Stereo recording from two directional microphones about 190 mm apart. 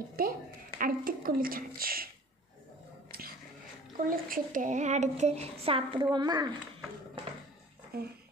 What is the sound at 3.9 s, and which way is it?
A child's voice, 45° right (ahead or behind).